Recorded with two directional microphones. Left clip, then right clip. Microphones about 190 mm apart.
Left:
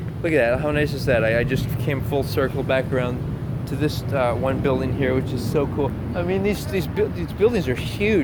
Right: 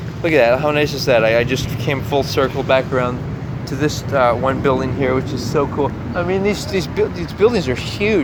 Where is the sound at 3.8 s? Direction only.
15° right (ahead or behind).